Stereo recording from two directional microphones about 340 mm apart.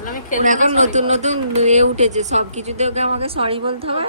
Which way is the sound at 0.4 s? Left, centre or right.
Right.